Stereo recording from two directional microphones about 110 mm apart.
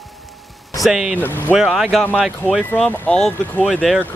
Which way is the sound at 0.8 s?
5° right (ahead or behind).